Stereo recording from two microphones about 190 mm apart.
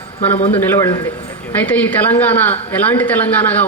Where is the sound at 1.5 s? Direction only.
10° left (ahead or behind).